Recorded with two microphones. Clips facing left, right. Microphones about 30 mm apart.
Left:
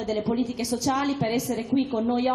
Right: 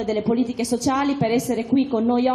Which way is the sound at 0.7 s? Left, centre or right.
Centre.